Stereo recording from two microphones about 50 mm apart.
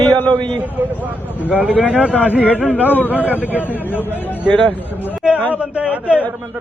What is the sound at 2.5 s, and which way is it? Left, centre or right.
Speech, left.